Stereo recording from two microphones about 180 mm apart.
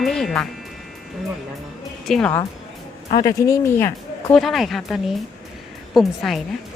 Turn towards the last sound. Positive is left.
turn(degrees=0)  # may be behind; listen again after turning